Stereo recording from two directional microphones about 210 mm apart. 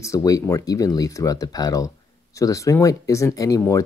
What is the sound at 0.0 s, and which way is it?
Speech, 15° left (ahead or behind).